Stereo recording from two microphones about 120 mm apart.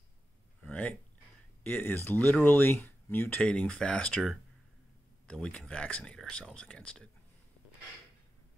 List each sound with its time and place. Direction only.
0.7 s a sound: 10° left (ahead or behind)
1.6 s speech: 15° left (ahead or behind)
5.3 s speech: 5° left (ahead or behind)